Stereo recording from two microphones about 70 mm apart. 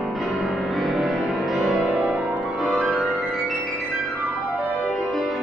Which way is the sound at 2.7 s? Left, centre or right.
Centre.